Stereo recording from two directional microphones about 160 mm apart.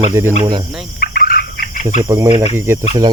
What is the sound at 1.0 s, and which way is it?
Fowl, 65° left (ahead or behind).